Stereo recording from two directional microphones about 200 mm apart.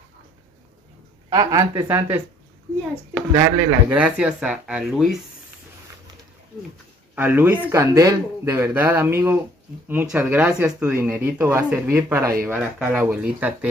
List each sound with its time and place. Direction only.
1.3 s speech: 15° right (ahead or behind)
3.3 s speech: 15° right (ahead or behind)
7.2 s speech: 10° right (ahead or behind)